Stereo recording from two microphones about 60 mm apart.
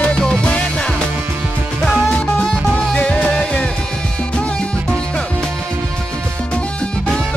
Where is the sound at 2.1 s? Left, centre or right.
Left.